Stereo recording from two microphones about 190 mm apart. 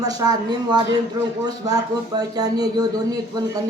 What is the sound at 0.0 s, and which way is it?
Speech, 20° right (ahead or behind).